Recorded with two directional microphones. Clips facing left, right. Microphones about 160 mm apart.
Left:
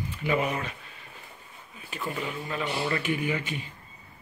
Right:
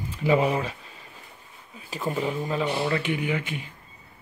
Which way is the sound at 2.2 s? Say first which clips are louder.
Right 7 dB; 25° right (ahead or behind).